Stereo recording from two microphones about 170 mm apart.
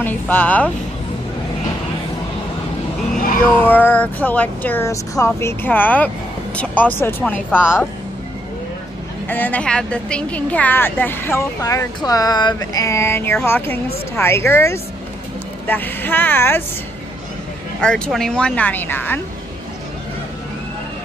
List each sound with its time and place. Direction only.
0.0 s a woman's voice: 10° left (ahead or behind)
3.6 s a woman's voice: 10° left (ahead or behind)
9.3 s a woman's voice: 10° left (ahead or behind)
17.7 s speech: 5° left (ahead or behind)